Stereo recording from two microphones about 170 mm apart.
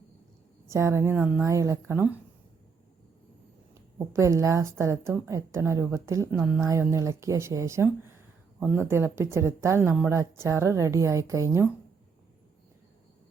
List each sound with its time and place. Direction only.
0.7 s a woman's voice: 15° right (ahead or behind)
3.9 s a woman's voice: 15° right (ahead or behind)